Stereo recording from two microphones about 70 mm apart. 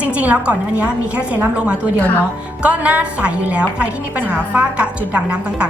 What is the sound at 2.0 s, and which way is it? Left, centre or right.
Speech, left.